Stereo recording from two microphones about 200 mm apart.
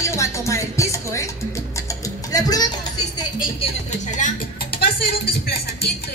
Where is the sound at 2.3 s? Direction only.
20° left (ahead or behind).